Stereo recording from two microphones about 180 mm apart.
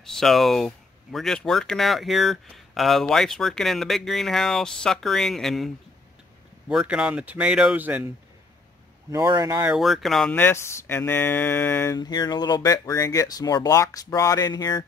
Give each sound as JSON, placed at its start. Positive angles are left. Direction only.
{"t": 0.0, "sound": "speech", "side_deg": 0}
{"t": 6.7, "sound": "speech", "side_deg": -5}
{"t": 9.1, "sound": "speech", "side_deg": -20}
{"t": 9.7, "sound": "speech", "side_deg": 0}